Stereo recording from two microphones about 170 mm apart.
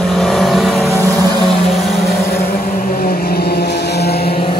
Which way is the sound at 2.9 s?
60° left (ahead or behind).